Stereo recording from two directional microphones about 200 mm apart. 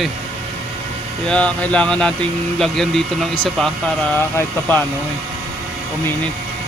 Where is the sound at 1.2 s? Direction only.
5° left (ahead or behind).